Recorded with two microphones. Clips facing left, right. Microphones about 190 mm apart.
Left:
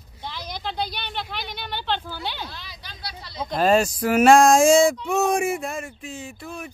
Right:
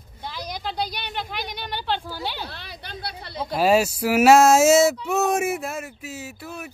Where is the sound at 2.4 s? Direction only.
60° right (ahead or behind).